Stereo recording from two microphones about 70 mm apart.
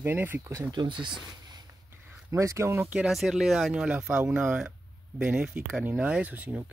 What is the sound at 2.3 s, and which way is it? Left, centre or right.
Speech, right.